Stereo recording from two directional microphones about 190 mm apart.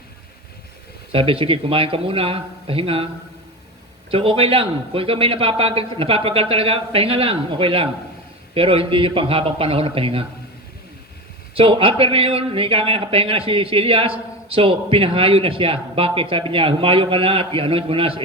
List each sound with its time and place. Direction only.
1.1 s speech: 30° right (ahead or behind)
4.1 s speech: 30° right (ahead or behind)
11.5 s speech: 30° right (ahead or behind)